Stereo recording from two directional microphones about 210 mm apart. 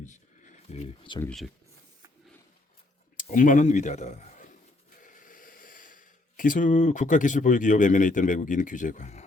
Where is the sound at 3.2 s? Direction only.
40° left (ahead or behind).